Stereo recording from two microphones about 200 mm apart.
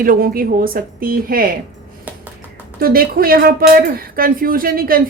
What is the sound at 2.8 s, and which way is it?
A woman's voice, 45° right (ahead or behind).